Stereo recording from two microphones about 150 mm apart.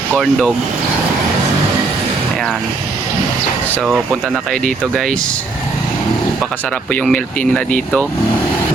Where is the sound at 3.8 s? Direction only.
Centre (ahead or behind).